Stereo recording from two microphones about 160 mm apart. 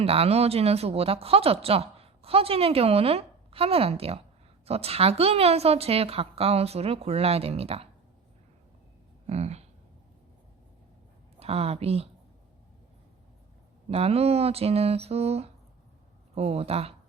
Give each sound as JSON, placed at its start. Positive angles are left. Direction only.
{"t": 0.0, "sound": "speech", "side_deg": -40}
{"t": 9.2, "sound": "speech", "side_deg": -40}
{"t": 11.3, "sound": "a woman's voice", "side_deg": -40}
{"t": 13.9, "sound": "speech", "side_deg": -40}